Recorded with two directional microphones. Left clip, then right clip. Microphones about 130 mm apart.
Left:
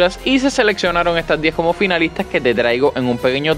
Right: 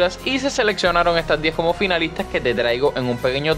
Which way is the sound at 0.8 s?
20° left (ahead or behind).